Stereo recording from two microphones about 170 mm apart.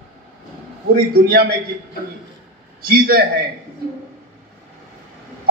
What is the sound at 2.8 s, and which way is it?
Speech, 60° right (ahead or behind).